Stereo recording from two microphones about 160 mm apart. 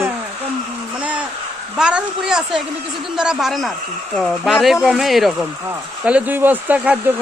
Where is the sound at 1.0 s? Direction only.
5° right (ahead or behind).